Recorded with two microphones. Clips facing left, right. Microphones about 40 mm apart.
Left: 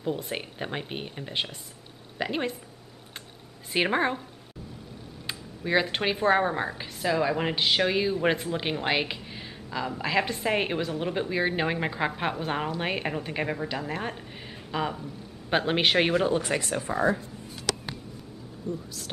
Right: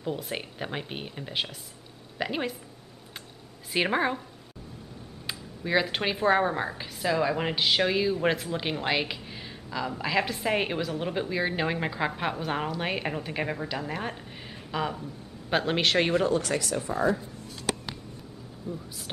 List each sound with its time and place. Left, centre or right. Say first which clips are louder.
0.0 s a woman's voice: left 2 dB; centre
3.7 s a man's voice: left 1 dB; centre
5.2 s a man's voice: left 1 dB; centre; by 17.2 s left
18.7 s speech: left 3 dB; centre